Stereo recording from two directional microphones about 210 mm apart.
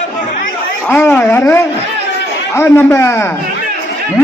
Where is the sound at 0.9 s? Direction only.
5° left (ahead or behind).